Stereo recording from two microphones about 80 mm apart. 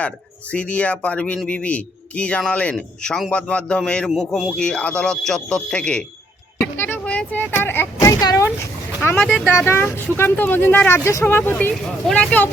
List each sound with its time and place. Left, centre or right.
0.5 s a man's voice: centre
6.7 s a sound: left
7.0 s speech: centre
8.0 s a sound: left
9.0 s speech: left
12.0 s speech: centre